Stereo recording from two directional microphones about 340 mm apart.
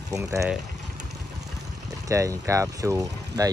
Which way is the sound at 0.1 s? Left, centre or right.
Centre.